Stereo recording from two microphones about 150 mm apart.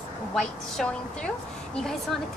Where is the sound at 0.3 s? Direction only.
5° left (ahead or behind).